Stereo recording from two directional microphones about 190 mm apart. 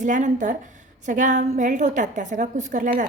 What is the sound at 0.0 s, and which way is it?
A woman's voice, 40° right (ahead or behind).